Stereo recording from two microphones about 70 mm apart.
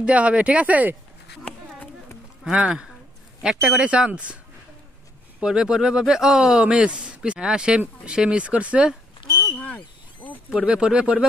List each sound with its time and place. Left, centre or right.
0.0 s speech: centre
2.4 s speech: centre
5.4 s speech: centre
9.3 s a sound: left
10.5 s speech: centre